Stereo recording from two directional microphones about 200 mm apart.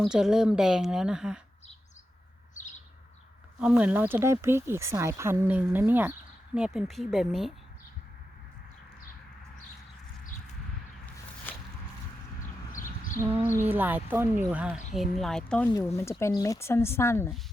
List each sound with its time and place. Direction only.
0.0 s a woman's voice: 5° right (ahead or behind)
3.6 s speech: 5° right (ahead or behind)
11.5 s walk: 10° left (ahead or behind)
12.4 s horse: 40° left (ahead or behind)
13.6 s a woman's voice: 10° right (ahead or behind); by 17.3 s 10° left (ahead or behind)